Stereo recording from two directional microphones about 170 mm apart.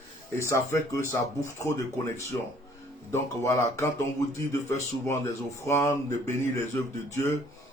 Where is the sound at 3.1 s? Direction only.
15° left (ahead or behind).